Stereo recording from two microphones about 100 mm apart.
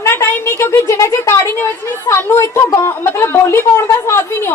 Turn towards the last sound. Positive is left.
turn(degrees=25)  # may be behind; listen again after turning